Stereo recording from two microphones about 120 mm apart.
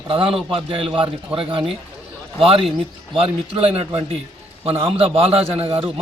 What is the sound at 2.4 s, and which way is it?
Speech, 50° right (ahead or behind).